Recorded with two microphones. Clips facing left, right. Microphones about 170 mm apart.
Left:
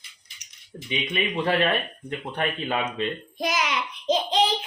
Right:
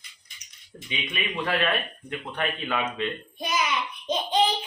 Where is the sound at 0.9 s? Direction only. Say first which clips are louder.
Left 5 dB; 30° left (ahead or behind).